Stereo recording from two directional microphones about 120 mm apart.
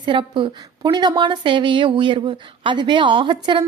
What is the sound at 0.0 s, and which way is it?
Speech, 45° right (ahead or behind).